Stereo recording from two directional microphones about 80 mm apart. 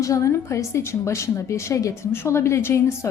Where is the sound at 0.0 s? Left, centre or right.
Left.